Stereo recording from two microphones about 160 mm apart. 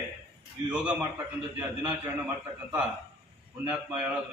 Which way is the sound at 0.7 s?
5° right (ahead or behind).